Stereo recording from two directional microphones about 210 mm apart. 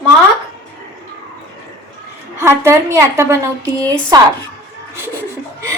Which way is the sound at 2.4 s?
15° right (ahead or behind).